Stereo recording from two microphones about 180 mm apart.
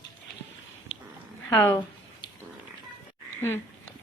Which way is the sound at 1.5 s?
15° left (ahead or behind).